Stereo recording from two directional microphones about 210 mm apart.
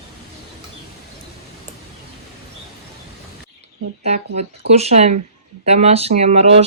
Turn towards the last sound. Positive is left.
turn(degrees=-30)  # may be behind; listen again after turning